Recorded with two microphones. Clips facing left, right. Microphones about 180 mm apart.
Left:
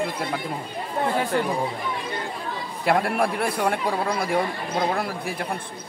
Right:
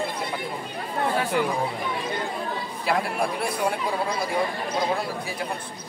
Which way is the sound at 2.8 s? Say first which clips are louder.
Left 4 dB; 55° left (ahead or behind).